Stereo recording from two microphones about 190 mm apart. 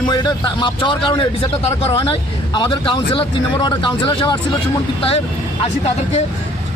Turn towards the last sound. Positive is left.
turn(degrees=30)  # may be behind; listen again after turning